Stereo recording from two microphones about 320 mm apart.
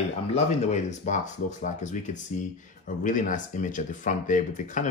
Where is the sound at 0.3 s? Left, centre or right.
Left.